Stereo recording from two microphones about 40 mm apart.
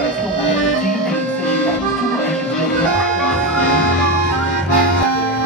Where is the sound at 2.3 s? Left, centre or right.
Centre.